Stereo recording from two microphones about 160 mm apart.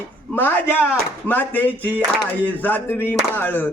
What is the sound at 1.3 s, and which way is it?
Speech, 10° left (ahead or behind).